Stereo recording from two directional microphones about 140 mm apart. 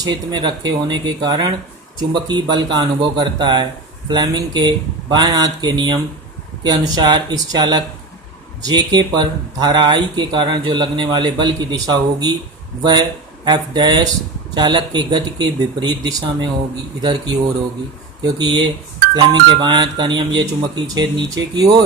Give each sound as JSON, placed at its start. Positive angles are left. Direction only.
{"t": 0.0, "sound": "speech", "side_deg": -30}
{"t": 18.3, "sound": "speech", "side_deg": -35}